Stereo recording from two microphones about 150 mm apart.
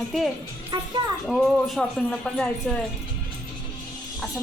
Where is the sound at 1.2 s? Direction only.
Centre (ahead or behind).